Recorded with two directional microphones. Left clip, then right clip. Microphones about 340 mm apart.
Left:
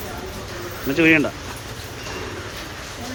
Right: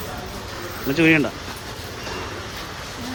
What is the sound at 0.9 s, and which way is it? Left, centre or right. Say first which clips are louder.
Speech: left 1 dB; centre.